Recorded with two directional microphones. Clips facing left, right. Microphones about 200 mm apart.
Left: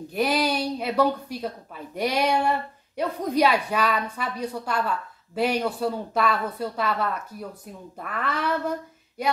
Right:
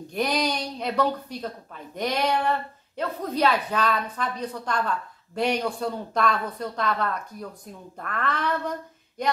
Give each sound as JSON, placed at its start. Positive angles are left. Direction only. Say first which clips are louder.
{"t": 0.1, "sound": "a woman's voice", "louder": "left 2 dB", "side_deg": 5}